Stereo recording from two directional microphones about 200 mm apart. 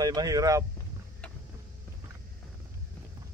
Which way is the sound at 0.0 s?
20° right (ahead or behind).